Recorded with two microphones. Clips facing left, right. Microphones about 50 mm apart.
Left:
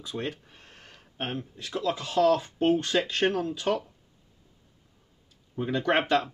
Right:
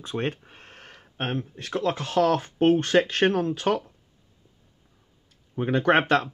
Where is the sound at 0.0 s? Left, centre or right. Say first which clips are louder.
Right 5 dB; right.